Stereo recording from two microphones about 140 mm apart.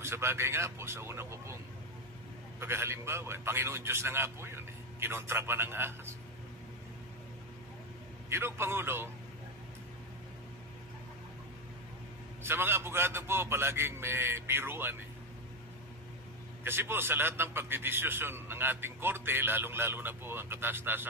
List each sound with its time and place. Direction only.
0.0 s speech: 15° right (ahead or behind)
2.6 s a man's voice: 15° right (ahead or behind)
8.3 s a man's voice: 15° right (ahead or behind)
12.4 s a man's voice: 15° right (ahead or behind)
16.6 s a man's voice: 15° right (ahead or behind)